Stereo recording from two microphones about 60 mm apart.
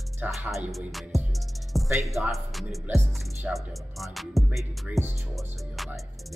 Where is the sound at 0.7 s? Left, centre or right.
Centre.